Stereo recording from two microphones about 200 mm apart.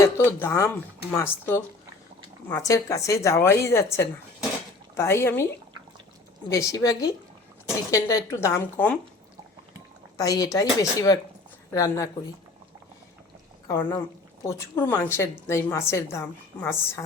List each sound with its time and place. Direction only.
0.0 s a woman's voice: 10° left (ahead or behind)
6.5 s a woman's voice: 15° left (ahead or behind)
10.2 s a woman's voice: 15° left (ahead or behind)
13.7 s a woman's voice: 20° left (ahead or behind)